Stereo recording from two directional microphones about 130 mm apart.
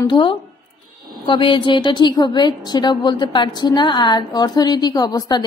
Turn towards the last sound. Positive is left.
turn(degrees=30)  # may be behind; listen again after turning